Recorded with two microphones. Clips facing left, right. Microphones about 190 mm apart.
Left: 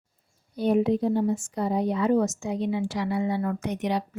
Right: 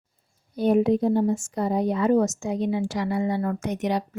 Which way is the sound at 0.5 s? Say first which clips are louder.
Right 2 dB; 45° right (ahead or behind).